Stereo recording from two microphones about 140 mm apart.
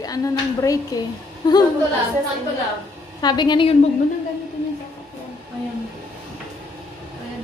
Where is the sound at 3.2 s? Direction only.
30° left (ahead or behind).